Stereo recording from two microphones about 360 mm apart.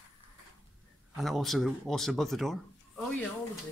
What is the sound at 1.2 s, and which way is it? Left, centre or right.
Speech, centre.